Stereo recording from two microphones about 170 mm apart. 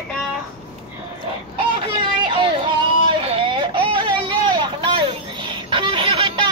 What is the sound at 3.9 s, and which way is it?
Vehicle, 30° right (ahead or behind).